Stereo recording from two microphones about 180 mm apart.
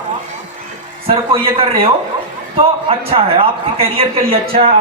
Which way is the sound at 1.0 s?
30° right (ahead or behind).